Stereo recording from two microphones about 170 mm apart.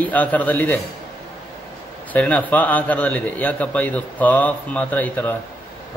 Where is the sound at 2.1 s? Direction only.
10° left (ahead or behind).